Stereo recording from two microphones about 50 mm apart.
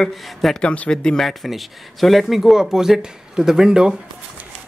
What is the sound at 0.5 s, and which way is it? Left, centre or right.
Speech, left.